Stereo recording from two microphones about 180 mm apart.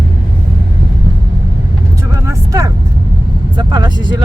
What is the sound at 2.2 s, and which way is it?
Vehicle, 15° right (ahead or behind).